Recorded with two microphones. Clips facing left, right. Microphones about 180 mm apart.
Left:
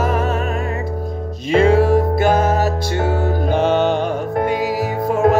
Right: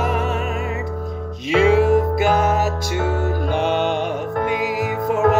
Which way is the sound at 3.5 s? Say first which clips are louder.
Left 4 dB; 45° left (ahead or behind).